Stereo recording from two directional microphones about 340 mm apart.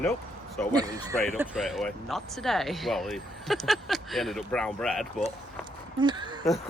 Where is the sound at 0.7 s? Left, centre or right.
Centre.